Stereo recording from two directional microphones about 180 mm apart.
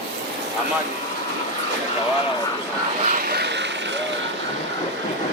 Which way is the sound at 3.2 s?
60° right (ahead or behind).